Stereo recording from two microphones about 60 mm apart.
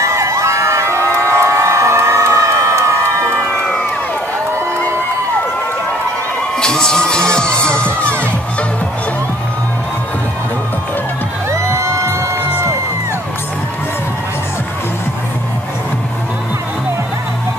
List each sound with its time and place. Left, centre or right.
0.0 s a sound: right
6.6 s music: centre
11.5 s music: right